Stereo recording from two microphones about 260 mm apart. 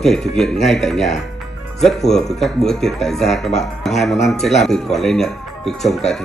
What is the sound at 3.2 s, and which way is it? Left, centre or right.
Speech, left.